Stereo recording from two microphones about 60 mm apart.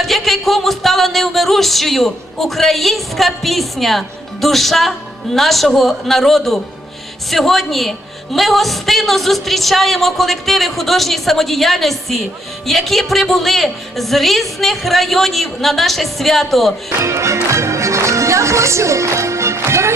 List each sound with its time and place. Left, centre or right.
0.0 s speech: centre
17.0 s speech: right